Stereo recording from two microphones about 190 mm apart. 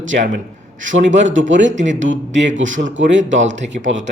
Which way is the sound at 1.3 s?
75° right (ahead or behind).